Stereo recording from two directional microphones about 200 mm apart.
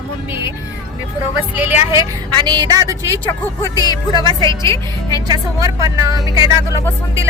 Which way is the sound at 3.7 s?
20° left (ahead or behind).